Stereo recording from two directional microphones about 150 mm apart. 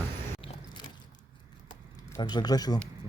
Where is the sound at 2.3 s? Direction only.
25° left (ahead or behind).